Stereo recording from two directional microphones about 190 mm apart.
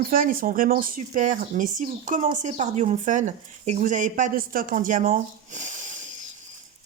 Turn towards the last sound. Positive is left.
turn(degrees=-40)  # may be behind; listen again after turning